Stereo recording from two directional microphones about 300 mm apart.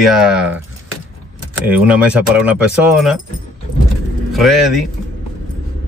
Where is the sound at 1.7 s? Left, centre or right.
Centre.